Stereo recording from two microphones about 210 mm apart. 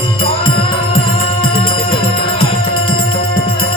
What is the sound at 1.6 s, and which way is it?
Music, 25° left (ahead or behind).